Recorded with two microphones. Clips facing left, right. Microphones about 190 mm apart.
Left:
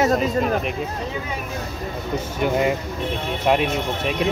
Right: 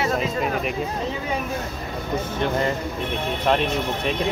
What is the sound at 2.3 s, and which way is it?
Speech, 10° left (ahead or behind).